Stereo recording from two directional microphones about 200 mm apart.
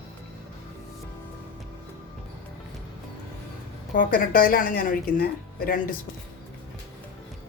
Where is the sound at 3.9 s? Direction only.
45° left (ahead or behind).